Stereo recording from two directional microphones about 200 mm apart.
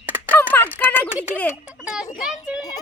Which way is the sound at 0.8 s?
10° left (ahead or behind).